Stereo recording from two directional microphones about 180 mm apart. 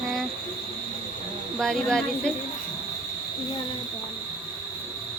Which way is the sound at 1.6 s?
Centre (ahead or behind).